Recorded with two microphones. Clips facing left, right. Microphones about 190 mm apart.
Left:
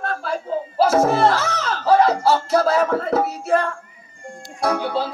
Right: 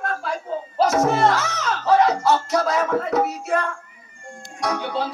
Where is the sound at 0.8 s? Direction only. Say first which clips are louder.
Left 2 dB; 30° left (ahead or behind).